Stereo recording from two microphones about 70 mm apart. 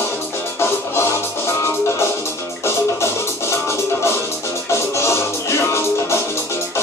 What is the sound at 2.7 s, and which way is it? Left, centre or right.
Music, left.